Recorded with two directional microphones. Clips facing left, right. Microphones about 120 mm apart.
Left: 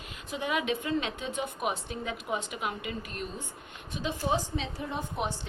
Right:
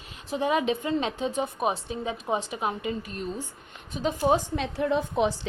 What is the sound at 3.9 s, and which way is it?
A woman's voice, 45° right (ahead or behind).